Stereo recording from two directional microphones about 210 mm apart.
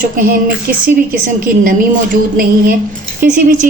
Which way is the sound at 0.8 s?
40° right (ahead or behind).